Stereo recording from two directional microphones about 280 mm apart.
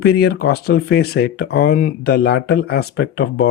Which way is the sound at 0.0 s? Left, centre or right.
Left.